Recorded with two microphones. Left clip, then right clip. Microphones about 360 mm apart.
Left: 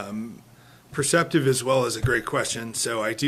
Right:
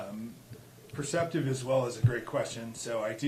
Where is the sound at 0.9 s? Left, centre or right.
Left.